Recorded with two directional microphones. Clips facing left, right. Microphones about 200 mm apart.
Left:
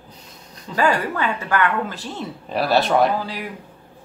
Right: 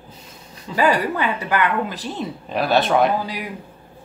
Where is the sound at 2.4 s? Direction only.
Centre (ahead or behind).